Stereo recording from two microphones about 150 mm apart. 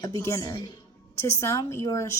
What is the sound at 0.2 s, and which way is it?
A woman's voice, 20° left (ahead or behind).